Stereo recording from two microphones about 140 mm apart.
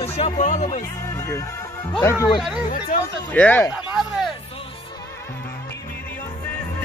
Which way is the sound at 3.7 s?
Centre (ahead or behind).